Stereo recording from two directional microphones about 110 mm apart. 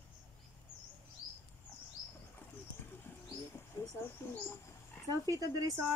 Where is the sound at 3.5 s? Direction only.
25° left (ahead or behind).